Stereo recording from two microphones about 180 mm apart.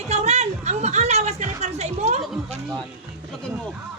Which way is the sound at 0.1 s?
40° right (ahead or behind).